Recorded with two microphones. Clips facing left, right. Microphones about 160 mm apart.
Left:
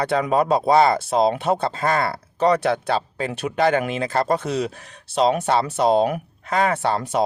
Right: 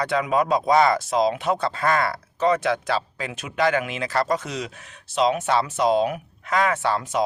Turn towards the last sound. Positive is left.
turn(degrees=30)  # may be behind; listen again after turning